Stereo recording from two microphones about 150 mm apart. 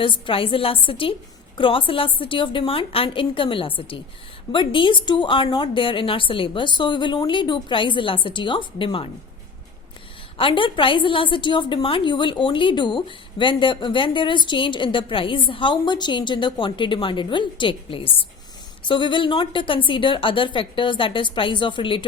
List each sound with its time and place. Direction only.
0.0 s a woman's voice: 35° left (ahead or behind)
10.3 s a woman's voice: 35° left (ahead or behind)